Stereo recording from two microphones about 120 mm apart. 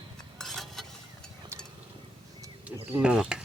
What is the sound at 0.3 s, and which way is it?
Stir, centre (ahead or behind).